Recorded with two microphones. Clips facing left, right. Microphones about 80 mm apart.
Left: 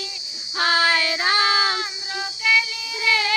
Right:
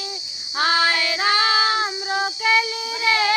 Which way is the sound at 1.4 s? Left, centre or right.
Right.